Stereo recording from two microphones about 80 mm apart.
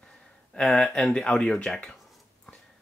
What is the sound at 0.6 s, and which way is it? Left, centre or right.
Speech, centre.